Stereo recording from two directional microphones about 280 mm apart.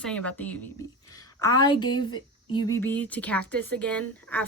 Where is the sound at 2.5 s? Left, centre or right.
Centre.